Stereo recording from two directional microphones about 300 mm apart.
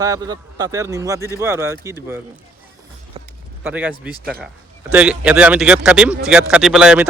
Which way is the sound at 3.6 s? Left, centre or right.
Centre.